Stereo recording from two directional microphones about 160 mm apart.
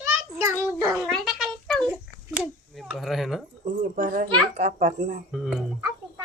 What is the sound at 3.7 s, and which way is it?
A child's voice, 55° right (ahead or behind).